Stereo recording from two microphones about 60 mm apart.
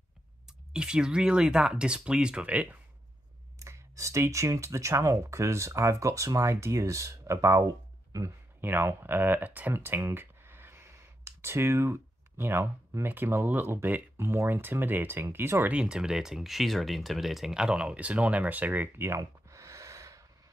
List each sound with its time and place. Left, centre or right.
0.5 s speech: centre
3.5 s speech: right
8.5 s speech: right
9.9 s a sound: right
14.1 s speech: right
15.7 s speech: centre
18.9 s gasp: right